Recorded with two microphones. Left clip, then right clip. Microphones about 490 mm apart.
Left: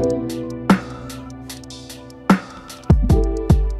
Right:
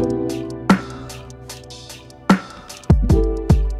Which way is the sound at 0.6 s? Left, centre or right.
Centre.